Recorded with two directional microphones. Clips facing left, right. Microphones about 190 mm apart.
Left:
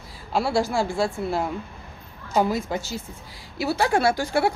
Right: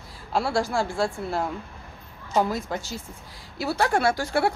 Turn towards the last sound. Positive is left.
turn(degrees=0)  # may be behind; listen again after turning